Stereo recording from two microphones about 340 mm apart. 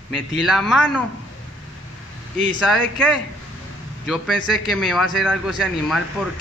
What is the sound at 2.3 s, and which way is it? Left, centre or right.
Speech, right.